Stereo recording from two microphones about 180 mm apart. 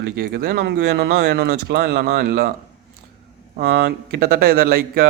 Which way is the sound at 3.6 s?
70° right (ahead or behind).